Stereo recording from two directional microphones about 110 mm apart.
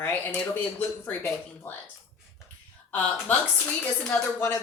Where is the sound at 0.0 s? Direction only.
15° left (ahead or behind).